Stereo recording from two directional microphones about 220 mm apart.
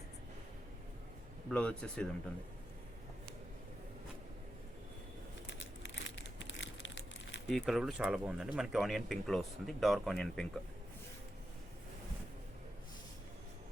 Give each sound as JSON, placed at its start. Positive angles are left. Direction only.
{"t": 1.5, "sound": "speech", "side_deg": 5}
{"t": 5.5, "sound": "crumpling", "side_deg": 55}
{"t": 7.4, "sound": "speech", "side_deg": 0}